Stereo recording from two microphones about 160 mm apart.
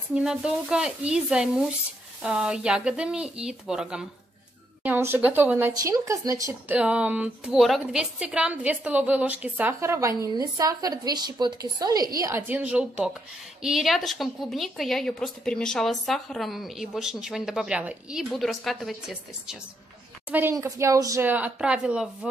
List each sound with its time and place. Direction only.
0.1 s a woman's voice: 5° right (ahead or behind); by 6.5 s 20° right (ahead or behind)
6.7 s a woman's voice: 5° right (ahead or behind)